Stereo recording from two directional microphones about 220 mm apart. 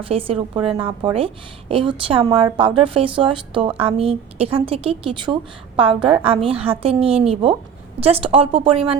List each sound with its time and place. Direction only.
0.1 s a woman's voice: 25° right (ahead or behind)